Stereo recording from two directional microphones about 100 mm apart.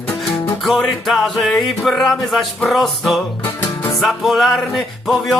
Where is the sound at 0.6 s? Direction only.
Centre (ahead or behind).